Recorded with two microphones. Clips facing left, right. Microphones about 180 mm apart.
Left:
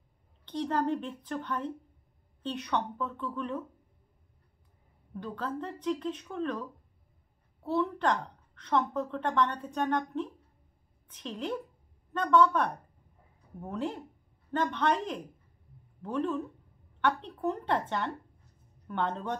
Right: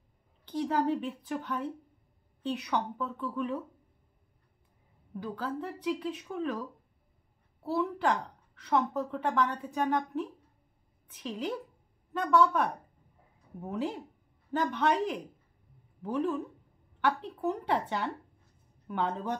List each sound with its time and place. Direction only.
0.5 s speech: 5° right (ahead or behind)
5.1 s a woman's voice: 5° right (ahead or behind)